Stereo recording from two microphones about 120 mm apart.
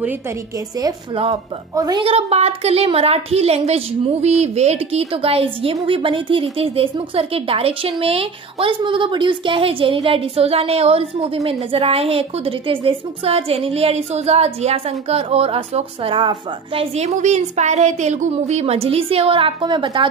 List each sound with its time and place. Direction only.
1.1 s a woman's voice: 55° right (ahead or behind)
1.8 s a woman's voice: 35° right (ahead or behind)
2.0 s a woman's voice: 55° right (ahead or behind); by 18.3 s 85° right
18.3 s a woman's voice: 60° right (ahead or behind); by 20.1 s 40° right (ahead or behind)